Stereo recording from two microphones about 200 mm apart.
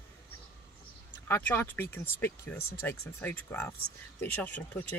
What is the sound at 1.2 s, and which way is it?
Speech, 10° left (ahead or behind).